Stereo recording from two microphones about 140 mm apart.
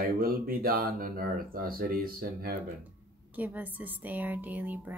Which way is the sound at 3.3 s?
10° right (ahead or behind).